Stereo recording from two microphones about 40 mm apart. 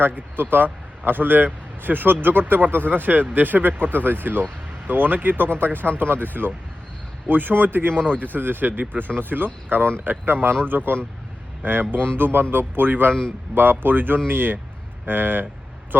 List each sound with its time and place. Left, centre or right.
0.0 s a man's voice: right
7.9 s speech: left
8.2 s speech: right